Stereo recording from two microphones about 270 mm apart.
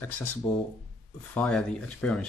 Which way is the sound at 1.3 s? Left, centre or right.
Centre.